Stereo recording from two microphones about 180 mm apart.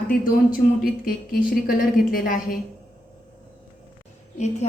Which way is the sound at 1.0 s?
55° left (ahead or behind).